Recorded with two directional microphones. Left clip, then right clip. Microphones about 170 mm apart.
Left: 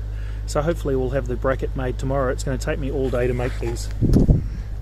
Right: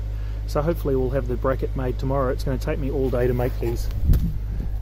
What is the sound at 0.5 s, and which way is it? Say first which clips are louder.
Speech: left 1 dB; 10° left (ahead or behind).